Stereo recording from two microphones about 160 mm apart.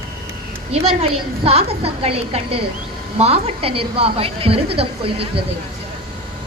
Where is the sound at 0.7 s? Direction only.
40° right (ahead or behind).